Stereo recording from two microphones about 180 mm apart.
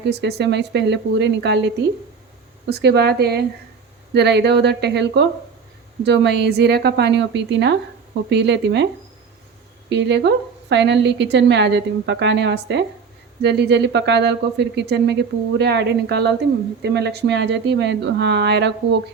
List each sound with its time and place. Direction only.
0.1 s speech: 65° right (ahead or behind)
9.9 s speech: 75° right (ahead or behind)